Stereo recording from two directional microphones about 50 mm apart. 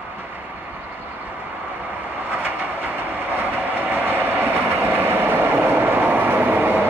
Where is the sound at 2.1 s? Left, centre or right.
Right.